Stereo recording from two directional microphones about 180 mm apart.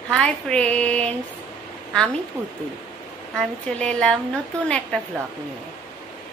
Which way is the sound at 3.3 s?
5° left (ahead or behind).